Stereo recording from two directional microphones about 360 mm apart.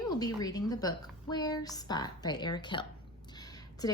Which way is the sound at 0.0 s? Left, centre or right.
Centre.